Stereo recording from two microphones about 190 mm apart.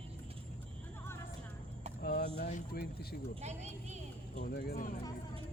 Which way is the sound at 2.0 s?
50° left (ahead or behind).